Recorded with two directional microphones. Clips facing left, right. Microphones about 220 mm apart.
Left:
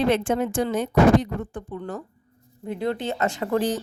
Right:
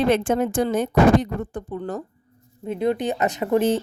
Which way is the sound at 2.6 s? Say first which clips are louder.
Right 4 dB; 20° right (ahead or behind).